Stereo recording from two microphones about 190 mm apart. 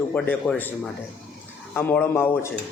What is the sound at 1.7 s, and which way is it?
Speech, 10° left (ahead or behind).